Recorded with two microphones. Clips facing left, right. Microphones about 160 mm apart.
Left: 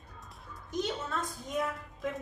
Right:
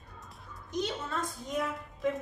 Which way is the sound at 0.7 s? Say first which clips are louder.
Even; centre (ahead or behind).